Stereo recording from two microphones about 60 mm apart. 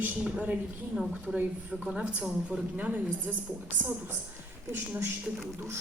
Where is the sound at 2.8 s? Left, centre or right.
Right.